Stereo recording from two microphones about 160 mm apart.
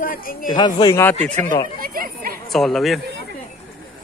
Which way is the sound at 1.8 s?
65° right (ahead or behind).